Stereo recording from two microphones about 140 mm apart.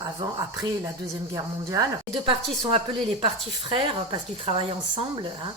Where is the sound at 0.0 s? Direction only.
25° right (ahead or behind).